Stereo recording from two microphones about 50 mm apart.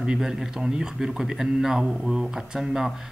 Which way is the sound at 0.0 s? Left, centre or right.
Centre.